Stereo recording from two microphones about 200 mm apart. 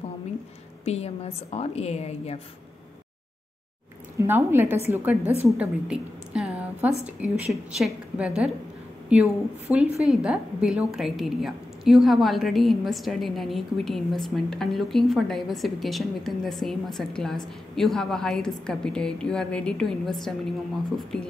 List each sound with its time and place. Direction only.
0.8 s a woman's voice: 30° left (ahead or behind)
4.2 s a woman's voice: 10° right (ahead or behind)
5.4 s a sound: 5° right (ahead or behind)
7.7 s a woman's voice: centre (ahead or behind)